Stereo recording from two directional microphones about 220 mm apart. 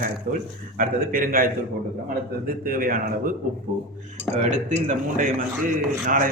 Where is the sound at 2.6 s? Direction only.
40° right (ahead or behind).